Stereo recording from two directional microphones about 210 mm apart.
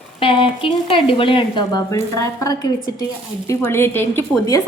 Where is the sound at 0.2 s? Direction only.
25° left (ahead or behind).